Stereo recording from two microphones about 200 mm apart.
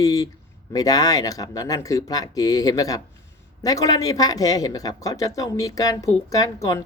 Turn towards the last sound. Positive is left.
turn(degrees=15)  # may be behind; listen again after turning